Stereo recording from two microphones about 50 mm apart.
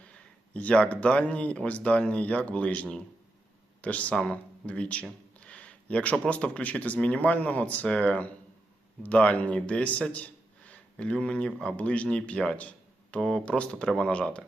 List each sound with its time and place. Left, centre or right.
0.5 s speech: left
4.1 s a man's voice: centre